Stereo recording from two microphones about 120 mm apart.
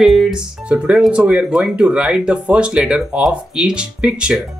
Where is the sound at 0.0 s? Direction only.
Centre (ahead or behind).